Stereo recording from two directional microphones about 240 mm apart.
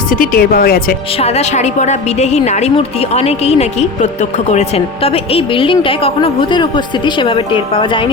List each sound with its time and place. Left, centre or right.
0.1 s speech: left
1.2 s a woman's voice: left